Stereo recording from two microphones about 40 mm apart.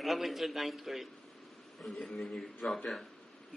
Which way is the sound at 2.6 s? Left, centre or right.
Left.